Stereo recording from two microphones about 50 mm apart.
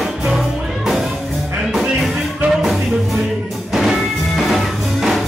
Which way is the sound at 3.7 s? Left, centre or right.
Centre.